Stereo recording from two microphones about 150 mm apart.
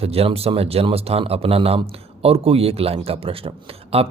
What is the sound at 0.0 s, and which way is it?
Speech, 40° right (ahead or behind).